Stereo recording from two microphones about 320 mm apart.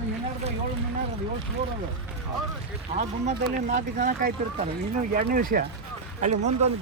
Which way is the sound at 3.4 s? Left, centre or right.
Right.